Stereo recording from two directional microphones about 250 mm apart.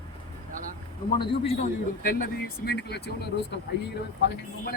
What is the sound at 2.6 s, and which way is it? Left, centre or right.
Speech, left.